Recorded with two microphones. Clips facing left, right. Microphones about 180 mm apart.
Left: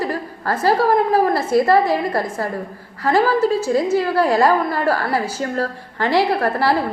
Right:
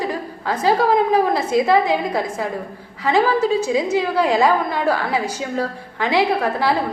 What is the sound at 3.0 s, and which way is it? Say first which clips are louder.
A woman's voice: left 1 dB; 5° left (ahead or behind).